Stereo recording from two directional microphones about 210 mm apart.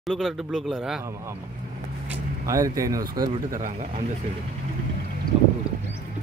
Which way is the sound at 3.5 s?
35° right (ahead or behind).